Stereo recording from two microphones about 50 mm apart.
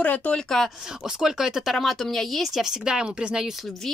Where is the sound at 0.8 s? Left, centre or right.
Centre.